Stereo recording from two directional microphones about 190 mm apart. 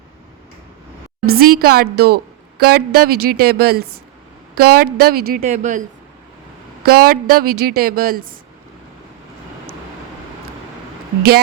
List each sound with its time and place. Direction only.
1.2 s a woman's voice: 55° right (ahead or behind)
6.8 s a woman's voice: 55° right (ahead or behind)